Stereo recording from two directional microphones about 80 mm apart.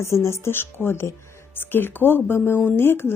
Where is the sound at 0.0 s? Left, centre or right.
Left.